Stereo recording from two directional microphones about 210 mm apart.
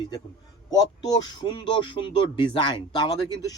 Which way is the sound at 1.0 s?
20° left (ahead or behind).